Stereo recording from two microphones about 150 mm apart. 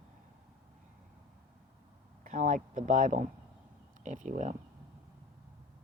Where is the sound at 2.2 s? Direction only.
55° right (ahead or behind).